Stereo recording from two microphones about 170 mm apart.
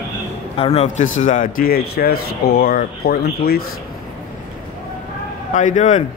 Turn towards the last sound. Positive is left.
turn(degrees=45)  # may be behind; listen again after turning